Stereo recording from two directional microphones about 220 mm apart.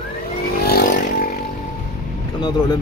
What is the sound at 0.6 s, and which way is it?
Vehicle, 40° left (ahead or behind).